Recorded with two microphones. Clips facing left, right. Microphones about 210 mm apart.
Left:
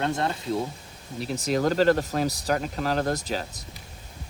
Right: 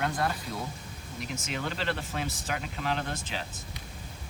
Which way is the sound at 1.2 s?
35° left (ahead or behind).